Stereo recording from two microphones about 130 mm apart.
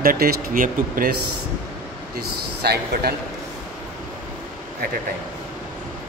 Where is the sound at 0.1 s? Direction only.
90° right.